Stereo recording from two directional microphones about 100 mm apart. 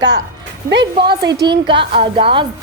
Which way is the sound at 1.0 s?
50° right (ahead or behind).